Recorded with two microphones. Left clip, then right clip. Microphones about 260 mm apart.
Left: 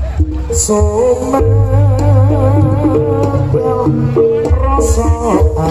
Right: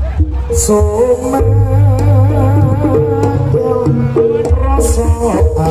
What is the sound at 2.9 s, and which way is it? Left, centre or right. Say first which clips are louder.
Music: right 2 dB; right.